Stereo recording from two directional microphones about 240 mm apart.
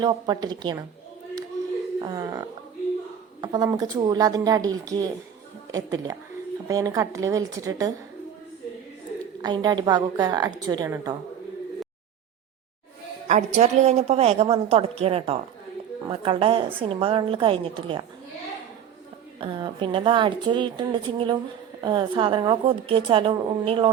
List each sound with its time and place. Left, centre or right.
0.0 s a woman's voice: centre
2.0 s a woman's voice: centre
9.4 s a woman's voice: centre
13.2 s a woman's voice: right
19.4 s a woman's voice: centre